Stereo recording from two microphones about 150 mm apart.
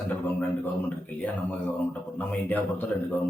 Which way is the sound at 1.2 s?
10° left (ahead or behind).